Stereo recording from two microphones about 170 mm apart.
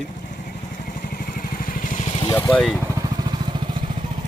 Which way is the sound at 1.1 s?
55° left (ahead or behind).